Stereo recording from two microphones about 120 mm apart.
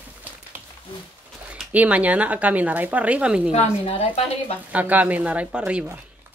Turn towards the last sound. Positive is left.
turn(degrees=-10)  # may be behind; listen again after turning